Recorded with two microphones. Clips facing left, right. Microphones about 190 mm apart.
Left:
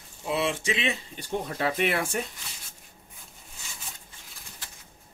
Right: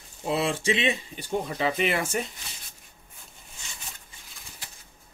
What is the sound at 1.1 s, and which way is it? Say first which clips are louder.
Speech: right 2 dB; 5° right (ahead or behind).